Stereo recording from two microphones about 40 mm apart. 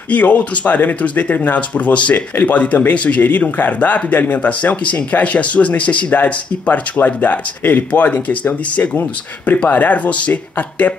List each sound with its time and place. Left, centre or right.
0.1 s speech: left
4.4 s speech: left